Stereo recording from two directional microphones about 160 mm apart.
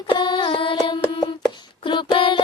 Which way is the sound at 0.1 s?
30° left (ahead or behind).